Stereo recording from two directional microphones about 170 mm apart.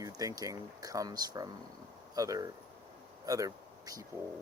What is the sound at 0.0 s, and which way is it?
Speech, 20° right (ahead or behind).